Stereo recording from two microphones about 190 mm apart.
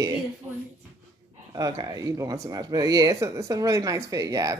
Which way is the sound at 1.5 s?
20° right (ahead or behind).